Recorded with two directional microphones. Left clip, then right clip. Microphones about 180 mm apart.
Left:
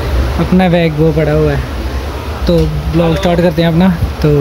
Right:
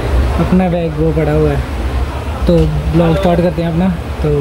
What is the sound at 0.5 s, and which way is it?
Speech, 10° left (ahead or behind).